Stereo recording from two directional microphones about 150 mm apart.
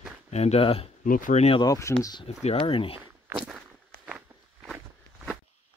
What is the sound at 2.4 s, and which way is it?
Speech, 40° left (ahead or behind).